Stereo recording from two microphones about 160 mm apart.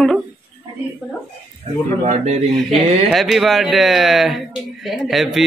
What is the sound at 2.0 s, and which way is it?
Speech, 45° right (ahead or behind).